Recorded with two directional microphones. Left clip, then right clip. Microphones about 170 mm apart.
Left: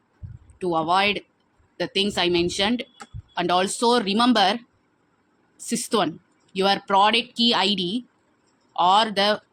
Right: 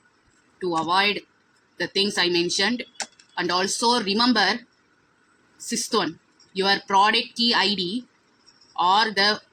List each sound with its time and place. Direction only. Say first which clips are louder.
0.6 s speech: left 1 dB; 35° left (ahead or behind)
5.6 s speech: left 1 dB; 35° left (ahead or behind)
8.8 s speech: left 1 dB; 35° left (ahead or behind)